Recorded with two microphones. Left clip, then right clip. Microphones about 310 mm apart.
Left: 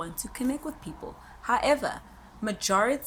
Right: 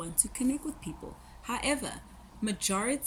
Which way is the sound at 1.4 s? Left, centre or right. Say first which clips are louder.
Left 8 dB; centre.